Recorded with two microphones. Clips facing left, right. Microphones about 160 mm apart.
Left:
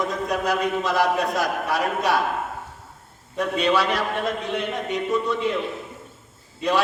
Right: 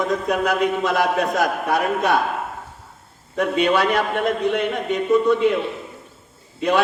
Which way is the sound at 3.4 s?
55° right (ahead or behind).